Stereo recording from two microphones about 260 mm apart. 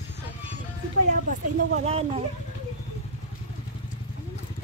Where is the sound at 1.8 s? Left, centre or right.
Right.